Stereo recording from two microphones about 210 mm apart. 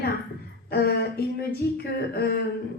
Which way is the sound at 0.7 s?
50° left (ahead or behind).